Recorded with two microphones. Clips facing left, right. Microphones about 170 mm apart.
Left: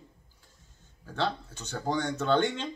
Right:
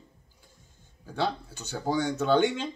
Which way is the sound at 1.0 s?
10° right (ahead or behind).